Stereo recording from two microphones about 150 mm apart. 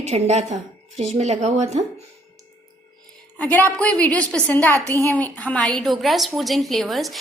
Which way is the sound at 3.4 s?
10° left (ahead or behind).